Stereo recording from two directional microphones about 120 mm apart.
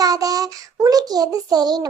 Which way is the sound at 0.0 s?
30° right (ahead or behind).